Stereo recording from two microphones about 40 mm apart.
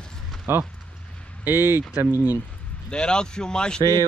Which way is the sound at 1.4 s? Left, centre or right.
Right.